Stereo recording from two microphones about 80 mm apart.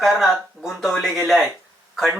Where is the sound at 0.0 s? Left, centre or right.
Centre.